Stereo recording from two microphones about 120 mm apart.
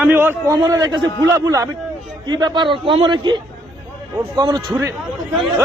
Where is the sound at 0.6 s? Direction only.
35° right (ahead or behind).